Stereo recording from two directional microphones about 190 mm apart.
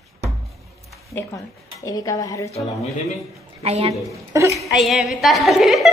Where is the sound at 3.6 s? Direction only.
35° right (ahead or behind).